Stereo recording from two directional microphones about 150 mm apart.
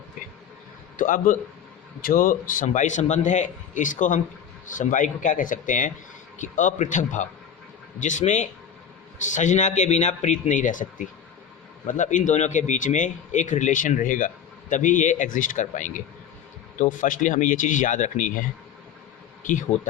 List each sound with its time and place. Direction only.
0.9 s a man's voice: 60° left (ahead or behind)
2.0 s speech: 70° left (ahead or behind)